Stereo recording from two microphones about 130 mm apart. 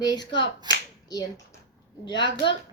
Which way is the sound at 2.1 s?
35° left (ahead or behind).